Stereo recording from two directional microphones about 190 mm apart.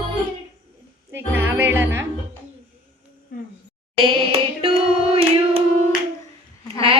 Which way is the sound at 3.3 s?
45° left (ahead or behind).